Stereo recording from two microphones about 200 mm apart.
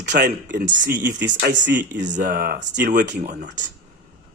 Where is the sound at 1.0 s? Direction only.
60° right (ahead or behind).